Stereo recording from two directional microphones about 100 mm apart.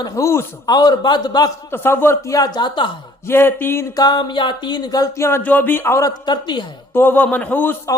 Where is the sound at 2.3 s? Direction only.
45° left (ahead or behind).